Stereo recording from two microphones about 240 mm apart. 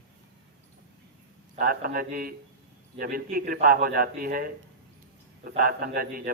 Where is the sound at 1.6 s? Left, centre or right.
Right.